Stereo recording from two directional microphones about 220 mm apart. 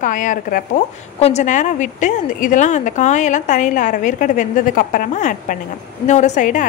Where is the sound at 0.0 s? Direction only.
35° left (ahead or behind).